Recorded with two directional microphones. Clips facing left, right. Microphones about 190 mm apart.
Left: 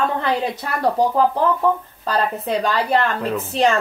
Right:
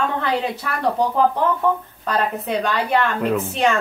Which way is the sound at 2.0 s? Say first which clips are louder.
Left 1 dB; 35° left (ahead or behind).